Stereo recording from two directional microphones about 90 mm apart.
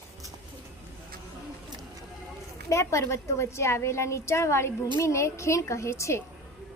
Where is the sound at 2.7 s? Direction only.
35° left (ahead or behind).